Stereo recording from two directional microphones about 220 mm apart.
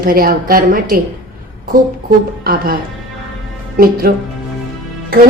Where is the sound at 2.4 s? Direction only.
40° right (ahead or behind).